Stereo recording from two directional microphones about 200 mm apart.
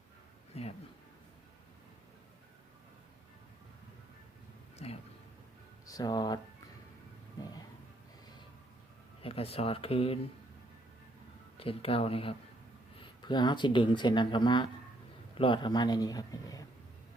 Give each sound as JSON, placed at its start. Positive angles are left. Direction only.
{"t": 0.5, "sound": "speech", "side_deg": 30}
{"t": 4.8, "sound": "speech", "side_deg": 30}
{"t": 5.8, "sound": "speech", "side_deg": 20}
{"t": 7.4, "sound": "a sound", "side_deg": 20}
{"t": 9.2, "sound": "speech", "side_deg": 30}
{"t": 11.6, "sound": "speech", "side_deg": 30}